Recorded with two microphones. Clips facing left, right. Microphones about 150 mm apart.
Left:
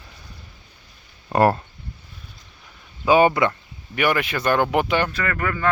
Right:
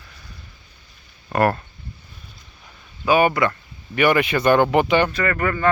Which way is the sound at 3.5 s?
5° left (ahead or behind).